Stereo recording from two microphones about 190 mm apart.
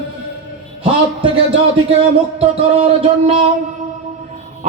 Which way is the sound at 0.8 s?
30° right (ahead or behind).